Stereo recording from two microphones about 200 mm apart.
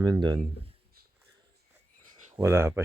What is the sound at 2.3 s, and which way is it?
Speech, 10° right (ahead or behind).